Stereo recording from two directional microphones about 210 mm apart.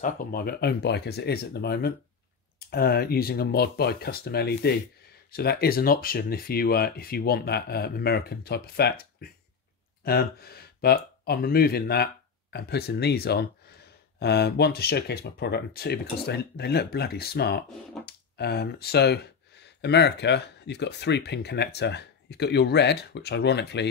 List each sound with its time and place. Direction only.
0.0 s speech: 45° left (ahead or behind)